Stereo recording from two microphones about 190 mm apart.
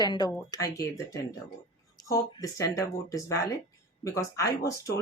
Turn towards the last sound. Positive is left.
turn(degrees=15)  # may be behind; listen again after turning